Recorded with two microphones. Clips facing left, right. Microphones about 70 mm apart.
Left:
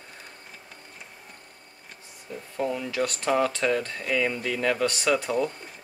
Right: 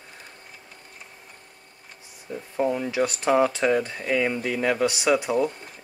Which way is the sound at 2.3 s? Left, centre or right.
Right.